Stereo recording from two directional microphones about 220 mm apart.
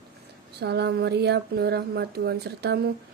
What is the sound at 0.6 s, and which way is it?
A woman's voice, 50° right (ahead or behind).